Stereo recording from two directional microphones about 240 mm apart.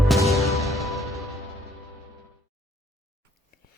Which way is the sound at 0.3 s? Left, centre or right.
Centre.